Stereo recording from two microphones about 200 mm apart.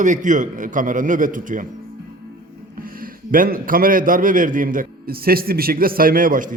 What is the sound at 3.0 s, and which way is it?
A man's voice, 45° right (ahead or behind).